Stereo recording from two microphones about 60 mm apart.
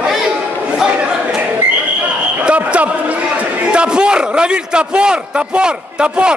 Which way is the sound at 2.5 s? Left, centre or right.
Right.